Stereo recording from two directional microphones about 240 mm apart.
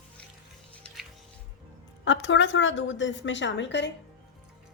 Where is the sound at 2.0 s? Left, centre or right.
Left.